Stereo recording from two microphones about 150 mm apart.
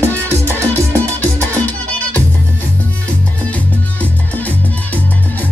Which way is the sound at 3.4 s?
10° left (ahead or behind).